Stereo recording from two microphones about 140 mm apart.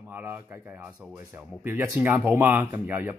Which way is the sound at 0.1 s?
15° right (ahead or behind).